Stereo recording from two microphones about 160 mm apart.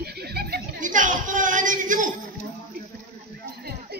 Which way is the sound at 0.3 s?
85° right.